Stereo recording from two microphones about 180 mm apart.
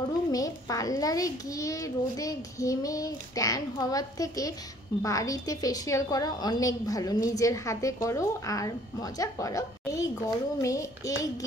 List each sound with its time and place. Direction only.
0.3 s a woman's voice: 20° left (ahead or behind)